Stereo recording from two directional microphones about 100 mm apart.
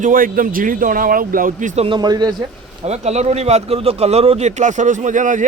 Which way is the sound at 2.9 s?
90° right.